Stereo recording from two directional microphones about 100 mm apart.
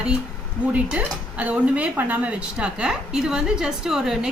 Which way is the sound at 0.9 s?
10° right (ahead or behind).